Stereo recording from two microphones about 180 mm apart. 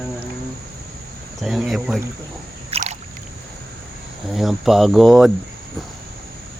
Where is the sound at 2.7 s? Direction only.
35° right (ahead or behind).